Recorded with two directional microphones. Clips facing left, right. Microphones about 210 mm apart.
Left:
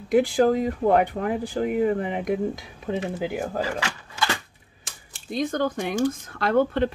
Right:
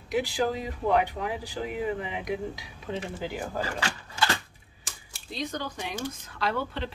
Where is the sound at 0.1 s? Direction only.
50° left (ahead or behind).